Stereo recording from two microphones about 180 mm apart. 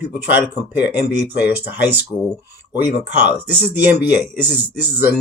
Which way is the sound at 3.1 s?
70° left (ahead or behind).